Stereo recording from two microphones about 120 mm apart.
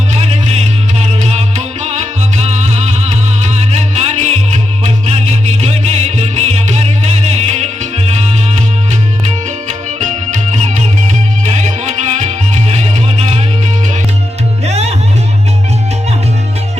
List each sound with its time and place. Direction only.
0.1 s music: 60° right (ahead or behind)
9.6 s music: 85° right; by 13.4 s 60° right (ahead or behind)
14.7 s music: 65° right (ahead or behind)